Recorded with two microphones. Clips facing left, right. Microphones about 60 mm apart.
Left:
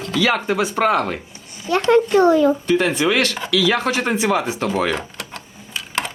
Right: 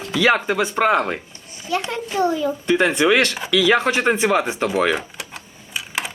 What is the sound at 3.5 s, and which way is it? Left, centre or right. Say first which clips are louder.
Speech: right 2 dB; right.